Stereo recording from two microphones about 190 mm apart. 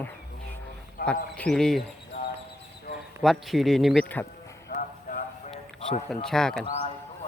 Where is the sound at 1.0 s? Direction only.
50° left (ahead or behind).